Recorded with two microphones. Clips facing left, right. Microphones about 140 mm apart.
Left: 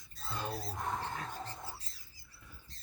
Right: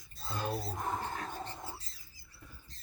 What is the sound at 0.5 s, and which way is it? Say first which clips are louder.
Speech: right 3 dB; 15° right (ahead or behind).